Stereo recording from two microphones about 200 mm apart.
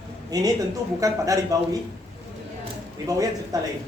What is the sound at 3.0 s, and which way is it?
Speech, 15° right (ahead or behind).